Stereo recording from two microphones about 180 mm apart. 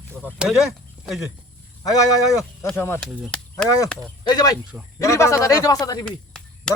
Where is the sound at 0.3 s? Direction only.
Centre (ahead or behind).